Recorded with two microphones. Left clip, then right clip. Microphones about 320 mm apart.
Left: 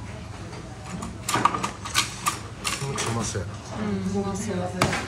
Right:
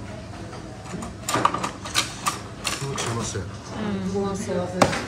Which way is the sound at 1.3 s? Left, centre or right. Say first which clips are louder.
Right 1 dB; right.